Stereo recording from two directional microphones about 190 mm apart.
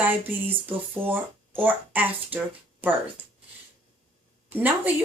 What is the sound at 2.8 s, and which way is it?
Speech, 10° right (ahead or behind).